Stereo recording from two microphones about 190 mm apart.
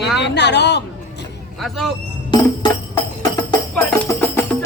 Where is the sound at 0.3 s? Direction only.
65° left (ahead or behind).